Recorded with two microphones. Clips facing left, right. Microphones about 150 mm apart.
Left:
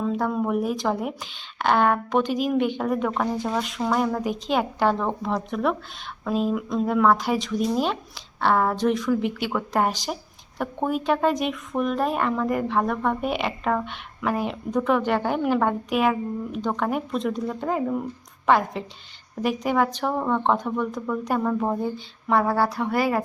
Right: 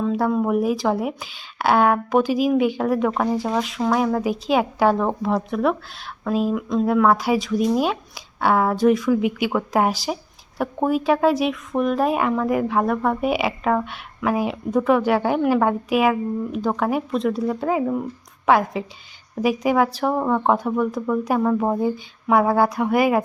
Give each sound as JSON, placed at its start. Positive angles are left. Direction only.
{"t": 0.0, "sound": "speech", "side_deg": 0}